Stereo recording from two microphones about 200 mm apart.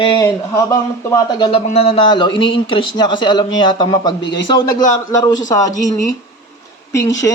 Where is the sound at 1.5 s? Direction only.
30° left (ahead or behind).